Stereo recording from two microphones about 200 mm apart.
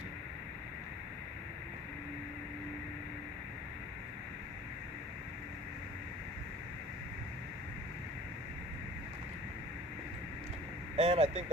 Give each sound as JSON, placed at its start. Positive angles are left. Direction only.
{"t": 10.9, "sound": "speech", "side_deg": -30}